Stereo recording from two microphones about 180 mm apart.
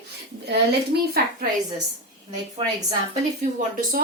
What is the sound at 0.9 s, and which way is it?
Speech, 65° right (ahead or behind).